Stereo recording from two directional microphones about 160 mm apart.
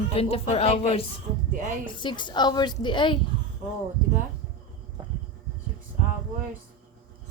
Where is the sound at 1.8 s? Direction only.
30° left (ahead or behind).